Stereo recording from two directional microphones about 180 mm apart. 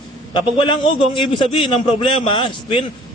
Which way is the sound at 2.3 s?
25° left (ahead or behind).